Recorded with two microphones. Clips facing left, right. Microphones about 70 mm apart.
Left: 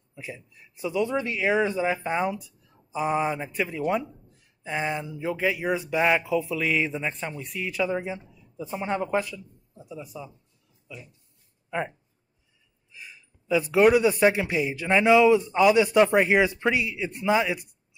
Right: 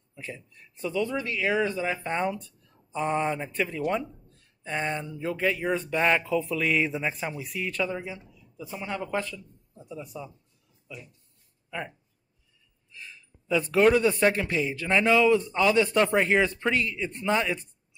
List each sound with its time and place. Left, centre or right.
0.1 s speech: centre
2.1 s speech: centre
7.8 s speech: left
9.3 s a man's voice: centre
12.9 s speech: centre